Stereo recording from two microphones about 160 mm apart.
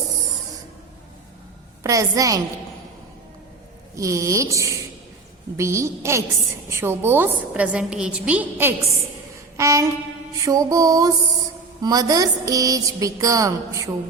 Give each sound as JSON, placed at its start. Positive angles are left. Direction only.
{"t": 1.8, "sound": "speech", "side_deg": -20}
{"t": 3.9, "sound": "a woman's voice", "side_deg": -20}